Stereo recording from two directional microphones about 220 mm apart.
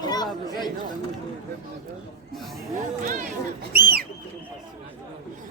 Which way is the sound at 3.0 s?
35° right (ahead or behind).